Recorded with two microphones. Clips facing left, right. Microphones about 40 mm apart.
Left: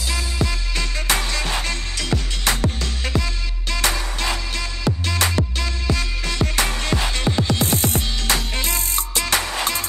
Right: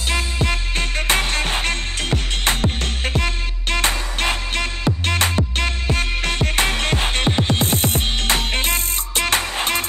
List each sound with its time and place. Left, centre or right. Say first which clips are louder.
0.1 s music: right 4 dB; right